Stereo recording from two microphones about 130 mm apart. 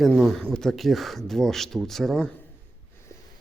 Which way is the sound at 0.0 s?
Centre (ahead or behind).